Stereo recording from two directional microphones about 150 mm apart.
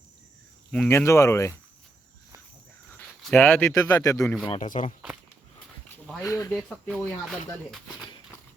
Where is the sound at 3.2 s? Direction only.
10° left (ahead or behind).